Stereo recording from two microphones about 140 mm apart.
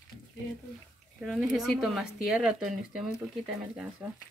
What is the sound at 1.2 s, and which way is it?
Speech, centre (ahead or behind).